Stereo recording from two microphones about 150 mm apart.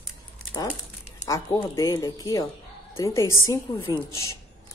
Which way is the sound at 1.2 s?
20° left (ahead or behind).